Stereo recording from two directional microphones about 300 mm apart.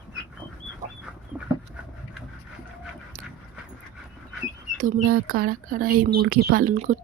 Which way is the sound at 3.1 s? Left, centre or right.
Right.